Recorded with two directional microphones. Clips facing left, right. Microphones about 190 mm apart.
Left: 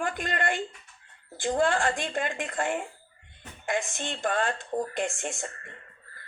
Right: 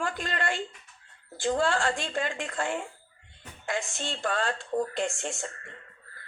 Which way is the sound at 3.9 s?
15° left (ahead or behind).